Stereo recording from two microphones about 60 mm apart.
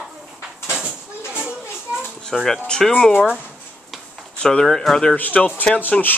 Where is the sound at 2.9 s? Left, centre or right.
Centre.